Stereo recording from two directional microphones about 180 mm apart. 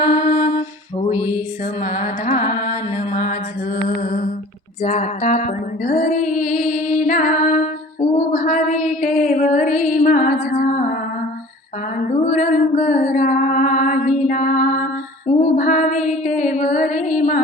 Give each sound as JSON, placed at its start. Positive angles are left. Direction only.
{"t": 0.0, "sound": "mantra", "side_deg": 45}
{"t": 1.0, "sound": "music", "side_deg": 45}
{"t": 1.8, "sound": "female singing", "side_deg": 45}
{"t": 8.3, "sound": "a sound", "side_deg": 50}
{"t": 11.9, "sound": "music", "side_deg": 45}
{"t": 15.3, "sound": "mantra", "side_deg": 45}